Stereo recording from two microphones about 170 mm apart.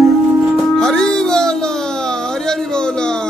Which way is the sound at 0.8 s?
5° left (ahead or behind).